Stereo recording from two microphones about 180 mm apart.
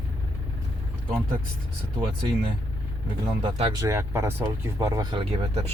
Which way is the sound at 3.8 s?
15° right (ahead or behind).